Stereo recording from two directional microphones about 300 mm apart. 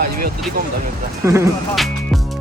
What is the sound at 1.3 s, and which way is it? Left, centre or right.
Speech, centre.